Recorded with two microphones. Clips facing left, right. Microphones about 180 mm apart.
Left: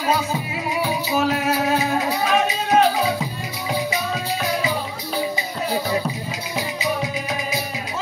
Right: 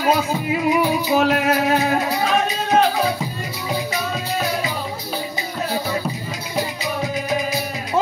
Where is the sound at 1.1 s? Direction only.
60° right (ahead or behind).